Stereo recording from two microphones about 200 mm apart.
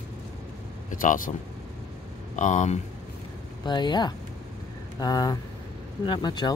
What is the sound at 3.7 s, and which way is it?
Speech, 20° left (ahead or behind).